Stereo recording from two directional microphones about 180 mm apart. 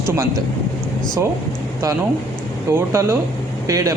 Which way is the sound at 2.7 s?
15° right (ahead or behind).